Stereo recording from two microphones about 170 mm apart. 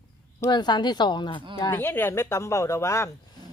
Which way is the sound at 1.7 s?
15° left (ahead or behind).